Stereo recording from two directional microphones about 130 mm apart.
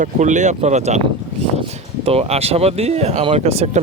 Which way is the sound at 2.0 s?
50° right (ahead or behind).